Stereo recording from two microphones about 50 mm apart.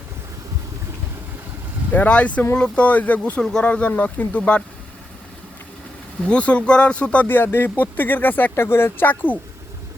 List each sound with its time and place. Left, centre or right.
1.9 s speech: left
6.2 s speech: left
7.3 s speech: left
8.5 s speech: left